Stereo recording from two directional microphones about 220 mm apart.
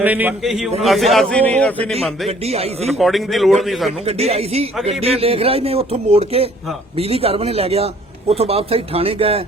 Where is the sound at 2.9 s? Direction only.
Centre (ahead or behind).